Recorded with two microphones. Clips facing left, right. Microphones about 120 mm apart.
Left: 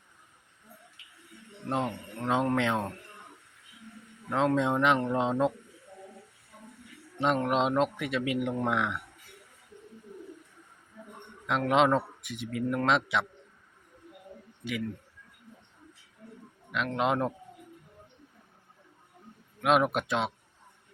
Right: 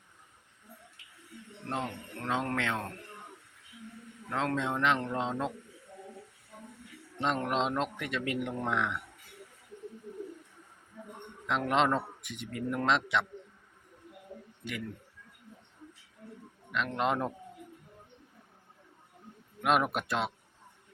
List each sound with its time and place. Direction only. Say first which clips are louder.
1.7 s speech: left 5 dB; 20° left (ahead or behind)
4.3 s speech: left 6 dB; 15° left (ahead or behind)
7.2 s speech: left 4 dB; 10° left (ahead or behind)
11.4 s a man's voice: left 3 dB; 5° left (ahead or behind)
16.7 s a man's voice: left 2 dB; 5° left (ahead or behind)
19.6 s a man's voice: left 3 dB; centre (ahead or behind)